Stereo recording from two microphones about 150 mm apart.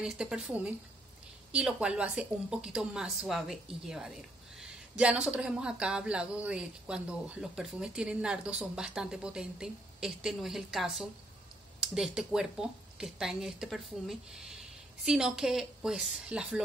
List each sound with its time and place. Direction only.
0.0 s a woman's voice: 5° right (ahead or behind)